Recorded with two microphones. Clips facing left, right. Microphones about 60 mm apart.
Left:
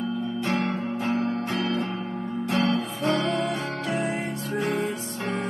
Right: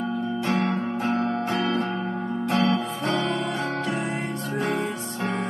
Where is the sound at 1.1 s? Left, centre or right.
Right.